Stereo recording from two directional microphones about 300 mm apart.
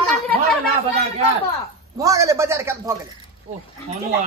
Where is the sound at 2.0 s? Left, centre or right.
Centre.